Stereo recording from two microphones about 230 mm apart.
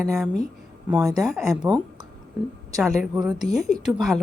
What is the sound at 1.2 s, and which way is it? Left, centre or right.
Speech, centre.